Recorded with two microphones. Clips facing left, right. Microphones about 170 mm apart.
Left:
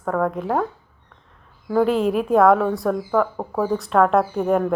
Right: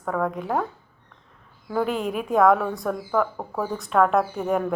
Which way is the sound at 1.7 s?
Centre (ahead or behind).